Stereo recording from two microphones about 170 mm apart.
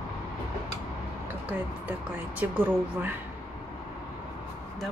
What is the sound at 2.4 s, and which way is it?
Speech, 10° right (ahead or behind).